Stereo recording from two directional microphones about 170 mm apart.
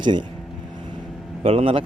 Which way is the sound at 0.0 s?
25° right (ahead or behind).